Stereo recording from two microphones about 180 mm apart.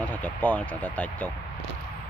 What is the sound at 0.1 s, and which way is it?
Speech, 10° left (ahead or behind).